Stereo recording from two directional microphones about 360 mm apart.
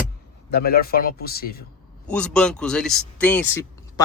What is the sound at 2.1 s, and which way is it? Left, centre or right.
Speech, centre.